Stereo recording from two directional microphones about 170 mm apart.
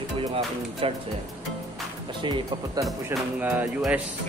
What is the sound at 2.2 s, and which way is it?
Speech, 30° right (ahead or behind).